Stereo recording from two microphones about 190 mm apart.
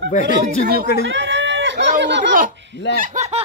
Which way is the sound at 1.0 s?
70° right (ahead or behind).